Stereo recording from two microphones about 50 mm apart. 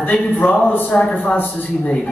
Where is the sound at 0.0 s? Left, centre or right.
Left.